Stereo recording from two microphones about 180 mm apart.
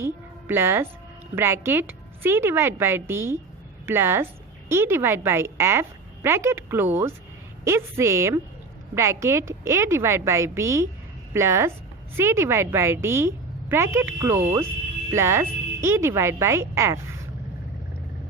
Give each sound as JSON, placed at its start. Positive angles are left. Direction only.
{"t": 0.0, "sound": "a woman's voice", "side_deg": -15}